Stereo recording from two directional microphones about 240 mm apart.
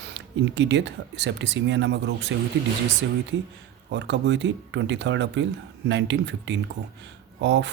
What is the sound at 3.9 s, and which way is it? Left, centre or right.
Speech, right.